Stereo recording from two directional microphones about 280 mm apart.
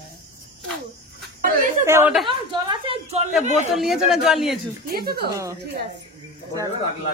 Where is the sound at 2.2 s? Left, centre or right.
Centre.